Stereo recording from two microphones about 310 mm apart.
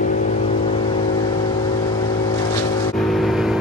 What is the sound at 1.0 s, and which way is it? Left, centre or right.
Vehicle, centre.